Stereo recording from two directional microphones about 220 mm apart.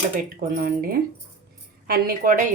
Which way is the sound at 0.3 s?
40° right (ahead or behind).